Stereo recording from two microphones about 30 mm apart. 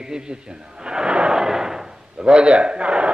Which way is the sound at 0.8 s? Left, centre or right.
Right.